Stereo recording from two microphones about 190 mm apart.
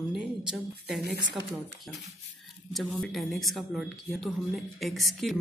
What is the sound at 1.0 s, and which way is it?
Speech, 60° right (ahead or behind).